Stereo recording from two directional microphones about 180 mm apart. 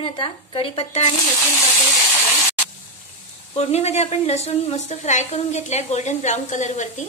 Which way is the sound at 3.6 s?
35° left (ahead or behind).